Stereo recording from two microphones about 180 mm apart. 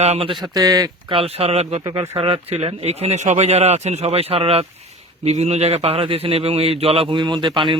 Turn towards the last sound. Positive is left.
turn(degrees=-25)  # may be behind; listen again after turning